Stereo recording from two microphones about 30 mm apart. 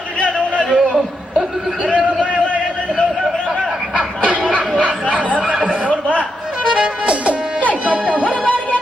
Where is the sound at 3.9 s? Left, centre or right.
Right.